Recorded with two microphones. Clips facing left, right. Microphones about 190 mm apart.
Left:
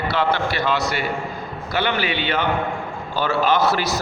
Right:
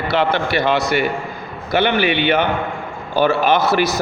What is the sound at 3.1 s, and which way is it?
Speech, 15° right (ahead or behind).